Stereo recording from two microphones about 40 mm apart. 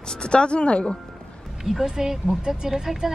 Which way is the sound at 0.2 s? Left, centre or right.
Left.